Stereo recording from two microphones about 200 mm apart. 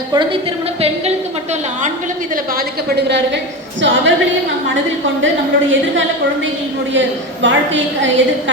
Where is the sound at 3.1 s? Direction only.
60° right (ahead or behind).